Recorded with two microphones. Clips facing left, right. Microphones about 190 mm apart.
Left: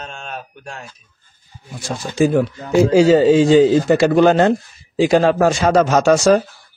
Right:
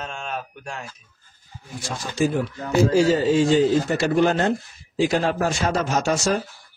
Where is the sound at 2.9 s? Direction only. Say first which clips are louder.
Left 9 dB; 90° left.